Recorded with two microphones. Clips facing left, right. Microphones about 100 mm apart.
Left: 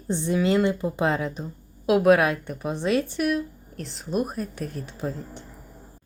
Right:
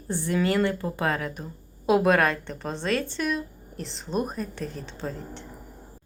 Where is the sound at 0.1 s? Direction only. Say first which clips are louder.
Left 2 dB; 20° left (ahead or behind).